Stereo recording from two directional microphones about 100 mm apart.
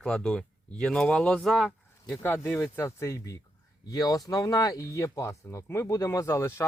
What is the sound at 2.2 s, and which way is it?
Speech, 20° left (ahead or behind).